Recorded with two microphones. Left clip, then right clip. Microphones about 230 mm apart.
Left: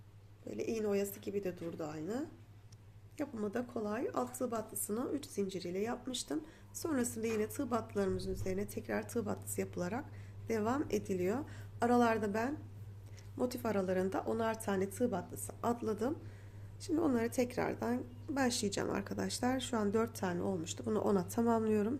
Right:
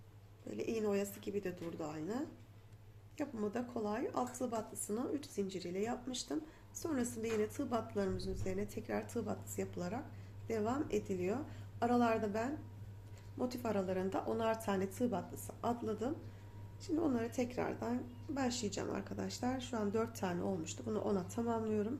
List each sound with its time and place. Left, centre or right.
0.4 s a woman's voice: centre